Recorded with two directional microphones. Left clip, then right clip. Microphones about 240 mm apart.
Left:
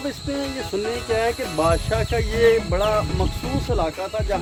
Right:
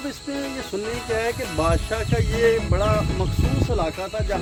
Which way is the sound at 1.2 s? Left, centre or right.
Centre.